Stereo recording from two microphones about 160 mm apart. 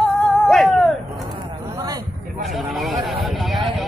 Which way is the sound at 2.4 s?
Centre (ahead or behind).